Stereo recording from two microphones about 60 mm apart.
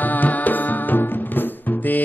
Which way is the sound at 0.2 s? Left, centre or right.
Left.